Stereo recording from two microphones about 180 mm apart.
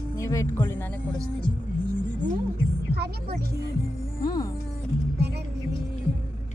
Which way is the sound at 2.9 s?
60° right (ahead or behind).